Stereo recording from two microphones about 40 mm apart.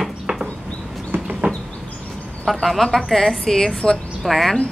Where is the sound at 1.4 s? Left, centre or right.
Right.